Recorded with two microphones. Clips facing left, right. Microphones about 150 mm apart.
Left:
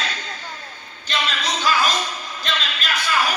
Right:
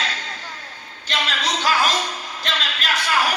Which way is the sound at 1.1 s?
80° right.